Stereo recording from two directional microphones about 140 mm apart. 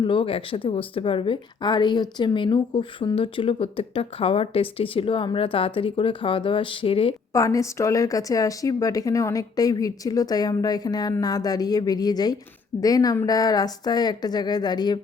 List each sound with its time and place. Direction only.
0.0 s a woman's voice: 35° left (ahead or behind)
7.3 s a woman's voice: 25° left (ahead or behind)